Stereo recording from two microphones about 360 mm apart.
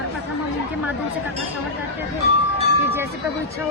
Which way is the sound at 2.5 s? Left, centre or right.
Centre.